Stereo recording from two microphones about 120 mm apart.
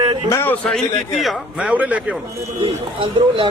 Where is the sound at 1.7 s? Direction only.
10° right (ahead or behind).